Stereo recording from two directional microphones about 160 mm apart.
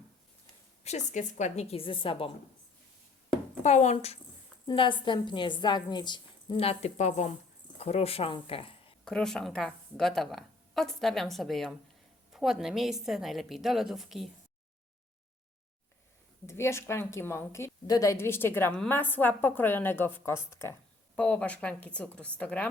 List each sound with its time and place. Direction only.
0.9 s a woman's voice: 50° left (ahead or behind)
3.6 s a woman's voice: 45° left (ahead or behind)
9.0 s a woman's voice: 5° left (ahead or behind)
16.5 s a woman's voice: 15° left (ahead or behind)